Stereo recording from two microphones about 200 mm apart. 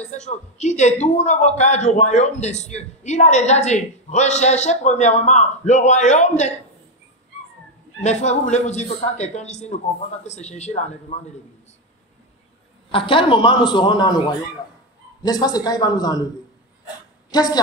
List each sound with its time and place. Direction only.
0.0 s speech: 35° left (ahead or behind)
8.0 s speech: 35° left (ahead or behind)
12.9 s a man's voice: 25° left (ahead or behind)
17.3 s a woman's voice: 20° left (ahead or behind)